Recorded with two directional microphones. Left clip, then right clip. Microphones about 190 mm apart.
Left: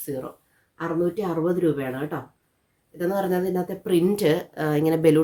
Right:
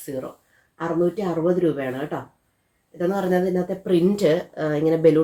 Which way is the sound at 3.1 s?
30° left (ahead or behind).